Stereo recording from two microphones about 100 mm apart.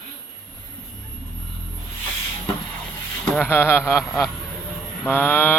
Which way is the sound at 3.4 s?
20° left (ahead or behind).